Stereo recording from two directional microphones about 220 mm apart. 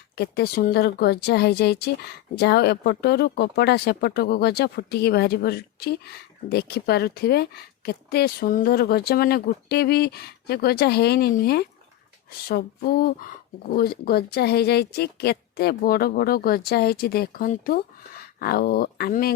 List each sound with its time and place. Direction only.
0.2 s a woman's voice: 45° left (ahead or behind)